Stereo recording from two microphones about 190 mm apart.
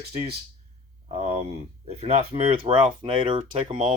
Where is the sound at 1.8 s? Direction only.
35° right (ahead or behind).